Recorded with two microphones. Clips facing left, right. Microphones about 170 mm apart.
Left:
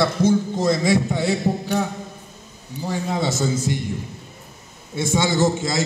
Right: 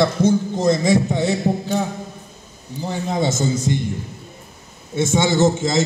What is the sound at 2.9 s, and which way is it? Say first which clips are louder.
Speech: right 2 dB; 20° right (ahead or behind).